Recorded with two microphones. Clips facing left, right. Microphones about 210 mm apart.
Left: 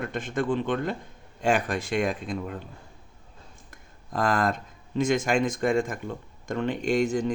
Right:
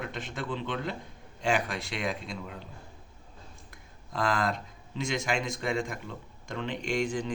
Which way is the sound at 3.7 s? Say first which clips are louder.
Left 3 dB; 50° left (ahead or behind).